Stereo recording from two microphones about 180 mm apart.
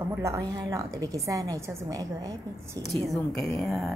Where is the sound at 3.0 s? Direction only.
Centre (ahead or behind).